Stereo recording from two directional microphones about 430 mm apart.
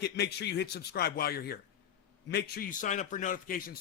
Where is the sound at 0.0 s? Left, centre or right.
Left.